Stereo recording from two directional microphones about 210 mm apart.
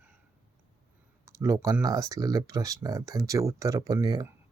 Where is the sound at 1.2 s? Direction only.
15° right (ahead or behind).